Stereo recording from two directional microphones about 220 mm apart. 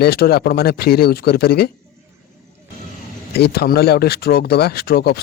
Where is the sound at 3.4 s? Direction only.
45° left (ahead or behind).